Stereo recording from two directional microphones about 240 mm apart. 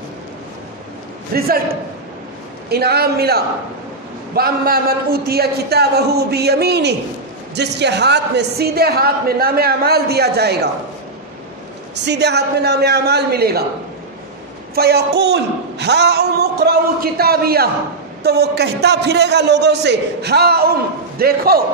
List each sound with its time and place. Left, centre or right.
1.3 s a man's voice: right
11.9 s speech: right
14.8 s a man's voice: right